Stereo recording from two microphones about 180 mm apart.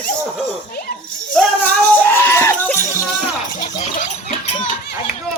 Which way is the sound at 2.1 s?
15° left (ahead or behind).